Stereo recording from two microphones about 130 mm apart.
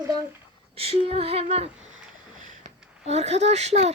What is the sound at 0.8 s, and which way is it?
Speech, 50° right (ahead or behind).